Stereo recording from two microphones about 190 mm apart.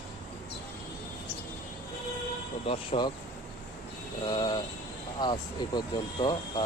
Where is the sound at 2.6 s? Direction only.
30° left (ahead or behind).